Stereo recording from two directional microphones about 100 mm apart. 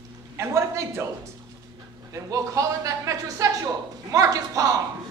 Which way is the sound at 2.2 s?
35° right (ahead or behind).